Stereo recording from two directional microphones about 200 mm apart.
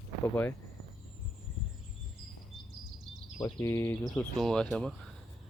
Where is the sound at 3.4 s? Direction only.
15° left (ahead or behind).